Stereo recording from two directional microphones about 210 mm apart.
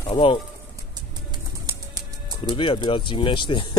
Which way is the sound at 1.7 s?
20° right (ahead or behind).